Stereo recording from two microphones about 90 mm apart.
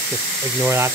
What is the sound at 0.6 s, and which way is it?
Speech, 25° right (ahead or behind).